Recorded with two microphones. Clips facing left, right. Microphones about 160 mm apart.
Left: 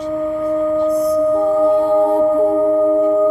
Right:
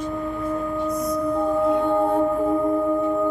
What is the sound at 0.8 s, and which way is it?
Singing bowl, 65° left (ahead or behind).